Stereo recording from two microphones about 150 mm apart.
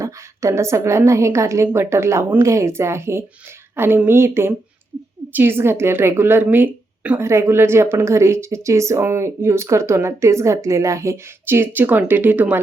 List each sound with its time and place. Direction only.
0.0 s a woman's voice: 20° right (ahead or behind)